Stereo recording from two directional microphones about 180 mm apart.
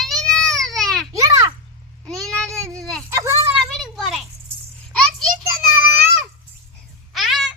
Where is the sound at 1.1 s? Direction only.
15° right (ahead or behind).